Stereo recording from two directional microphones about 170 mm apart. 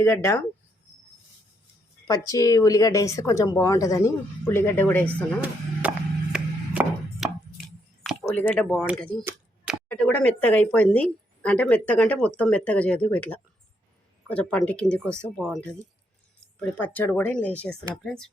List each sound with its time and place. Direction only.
0.0 s speech: 15° left (ahead or behind)
2.0 s speech: 20° left (ahead or behind)
5.8 s music: 10° right (ahead or behind)
6.3 s chopping: 5° right (ahead or behind)
8.2 s speech: 10° left (ahead or behind)